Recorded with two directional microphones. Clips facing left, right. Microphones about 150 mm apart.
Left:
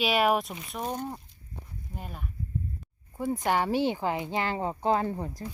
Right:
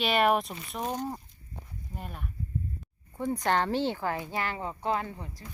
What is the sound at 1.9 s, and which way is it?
A woman's voice, centre (ahead or behind).